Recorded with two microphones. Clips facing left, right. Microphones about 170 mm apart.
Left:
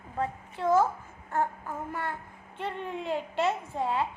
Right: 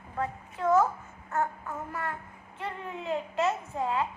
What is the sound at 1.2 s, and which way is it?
A child's voice, 30° left (ahead or behind).